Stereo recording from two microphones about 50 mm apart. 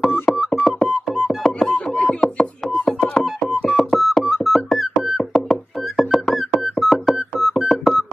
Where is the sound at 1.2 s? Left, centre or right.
Centre.